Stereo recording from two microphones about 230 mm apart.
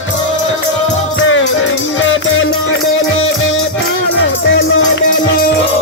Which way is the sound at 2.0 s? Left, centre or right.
Left.